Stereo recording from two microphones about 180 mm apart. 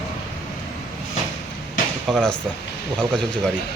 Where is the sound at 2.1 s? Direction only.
Centre (ahead or behind).